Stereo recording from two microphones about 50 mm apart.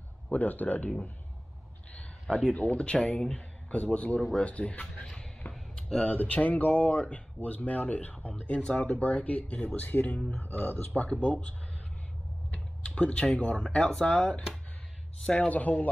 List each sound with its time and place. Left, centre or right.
0.3 s speech: left
2.5 s a man's voice: left
5.0 s a sound: centre
6.0 s speech: left
7.4 s speech: left
12.5 s speech: left
15.3 s speech: left